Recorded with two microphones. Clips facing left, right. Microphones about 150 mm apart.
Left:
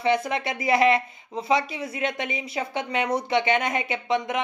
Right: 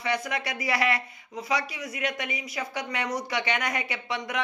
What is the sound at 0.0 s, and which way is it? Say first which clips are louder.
Speech: left 6 dB; 25° left (ahead or behind).